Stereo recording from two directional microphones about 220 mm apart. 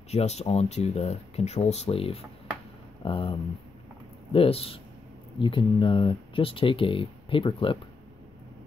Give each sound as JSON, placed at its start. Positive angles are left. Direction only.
{"t": 0.1, "sound": "speech", "side_deg": 30}